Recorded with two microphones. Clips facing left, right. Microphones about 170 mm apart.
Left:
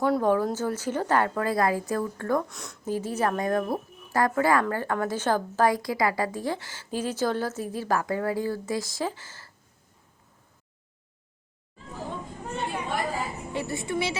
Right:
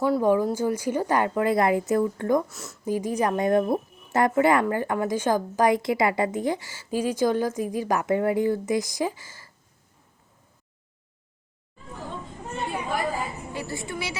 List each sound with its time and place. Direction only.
0.0 s a woman's voice: 5° right (ahead or behind)
2.5 s speech: centre (ahead or behind)
2.9 s a woman's voice: 15° right (ahead or behind)
12.5 s chatter: 5° right (ahead or behind)
13.5 s a woman's voice: 25° left (ahead or behind)